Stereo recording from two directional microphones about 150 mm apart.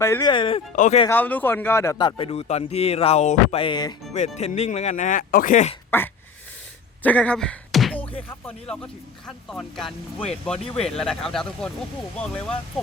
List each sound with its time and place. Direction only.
0.0 s speech: 20° left (ahead or behind)
0.3 s speech: 35° left (ahead or behind)
1.0 s speech: 10° left (ahead or behind); by 3.9 s 30° left (ahead or behind)
4.4 s speech: 50° left (ahead or behind)
5.9 s speech: 15° left (ahead or behind)
7.9 s speech: 10° left (ahead or behind)